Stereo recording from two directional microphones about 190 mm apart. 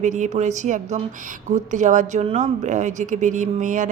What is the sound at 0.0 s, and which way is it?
Speech, 40° right (ahead or behind).